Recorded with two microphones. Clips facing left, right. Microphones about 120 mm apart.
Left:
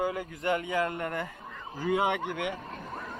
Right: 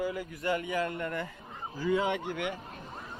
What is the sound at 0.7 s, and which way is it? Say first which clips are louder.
Speech: left 2 dB; 25° left (ahead or behind).